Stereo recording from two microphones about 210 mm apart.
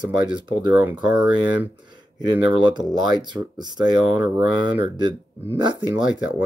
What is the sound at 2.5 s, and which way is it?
Speech, 20° right (ahead or behind).